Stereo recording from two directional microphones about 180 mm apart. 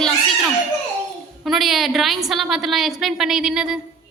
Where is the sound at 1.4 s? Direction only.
Centre (ahead or behind).